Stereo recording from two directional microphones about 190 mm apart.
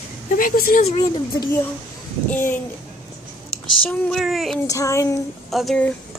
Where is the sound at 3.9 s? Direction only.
Centre (ahead or behind).